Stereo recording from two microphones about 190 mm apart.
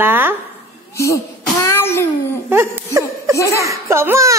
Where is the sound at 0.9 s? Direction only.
15° left (ahead or behind).